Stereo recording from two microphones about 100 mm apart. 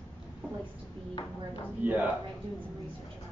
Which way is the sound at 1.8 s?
15° right (ahead or behind).